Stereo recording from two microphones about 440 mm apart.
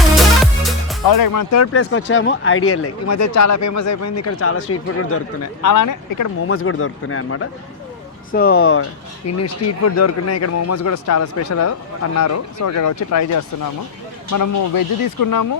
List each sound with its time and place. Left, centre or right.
0.6 s music: centre
1.0 s speech: left
5.6 s speech: left
6.5 s speech: left